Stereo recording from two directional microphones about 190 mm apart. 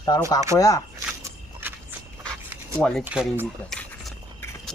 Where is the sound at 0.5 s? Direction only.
20° left (ahead or behind).